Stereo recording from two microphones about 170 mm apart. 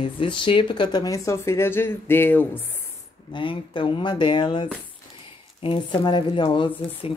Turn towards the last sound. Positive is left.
turn(degrees=30)  # may be behind; listen again after turning